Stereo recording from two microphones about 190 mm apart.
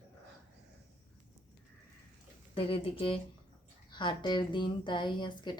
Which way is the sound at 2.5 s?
30° left (ahead or behind).